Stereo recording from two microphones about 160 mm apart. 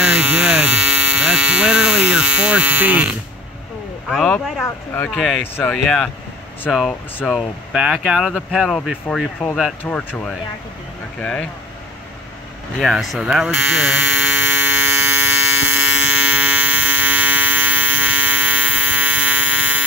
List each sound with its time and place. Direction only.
0.0 s hum: 10° right (ahead or behind)
4.1 s speech: centre (ahead or behind)
4.6 s speech: 15° left (ahead or behind)
12.7 s electric shaver: centre (ahead or behind)